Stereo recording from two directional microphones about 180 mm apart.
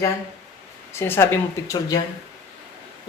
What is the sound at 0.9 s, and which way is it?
Speech, 15° left (ahead or behind).